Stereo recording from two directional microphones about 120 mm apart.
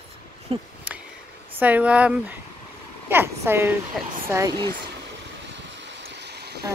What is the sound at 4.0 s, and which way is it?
Speech, centre (ahead or behind).